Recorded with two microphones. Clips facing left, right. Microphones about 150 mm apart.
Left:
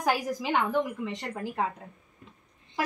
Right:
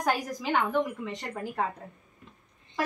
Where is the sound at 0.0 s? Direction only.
10° left (ahead or behind).